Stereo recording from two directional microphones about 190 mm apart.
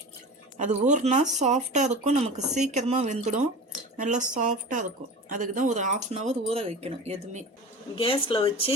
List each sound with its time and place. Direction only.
0.6 s speech: 40° right (ahead or behind)
7.9 s speech: 30° left (ahead or behind)